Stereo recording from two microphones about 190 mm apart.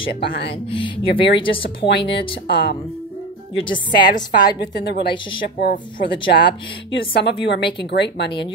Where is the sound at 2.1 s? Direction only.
55° left (ahead or behind).